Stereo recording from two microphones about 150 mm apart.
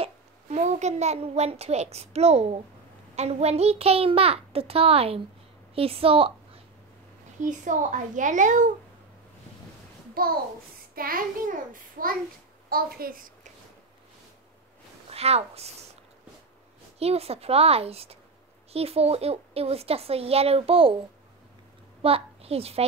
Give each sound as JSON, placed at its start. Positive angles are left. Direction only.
{"t": 0.0, "sound": "a child's voice", "side_deg": -45}
{"t": 7.4, "sound": "a child's voice", "side_deg": -55}
{"t": 10.2, "sound": "a child's voice", "side_deg": -80}
{"t": 11.0, "sound": "a child's voice", "side_deg": -70}
{"t": 12.6, "sound": "a woman's voice", "side_deg": -80}
{"t": 15.0, "sound": "a woman's voice", "side_deg": -45}
{"t": 17.0, "sound": "a woman's voice", "side_deg": -45}
{"t": 22.0, "sound": "a child's voice", "side_deg": -40}